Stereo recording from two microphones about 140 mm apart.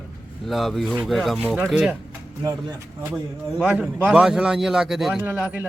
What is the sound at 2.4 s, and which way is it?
Speech, 25° right (ahead or behind).